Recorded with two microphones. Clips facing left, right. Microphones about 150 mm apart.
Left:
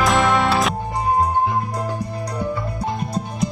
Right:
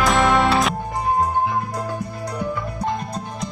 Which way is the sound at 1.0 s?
15° left (ahead or behind).